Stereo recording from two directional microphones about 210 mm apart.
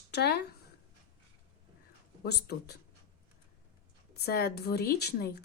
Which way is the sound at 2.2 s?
50° left (ahead or behind).